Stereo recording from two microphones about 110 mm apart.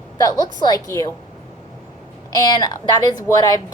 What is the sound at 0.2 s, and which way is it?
Speech, 35° left (ahead or behind).